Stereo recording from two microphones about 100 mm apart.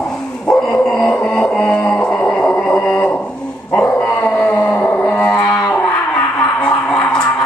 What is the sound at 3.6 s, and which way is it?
Dog, 15° left (ahead or behind).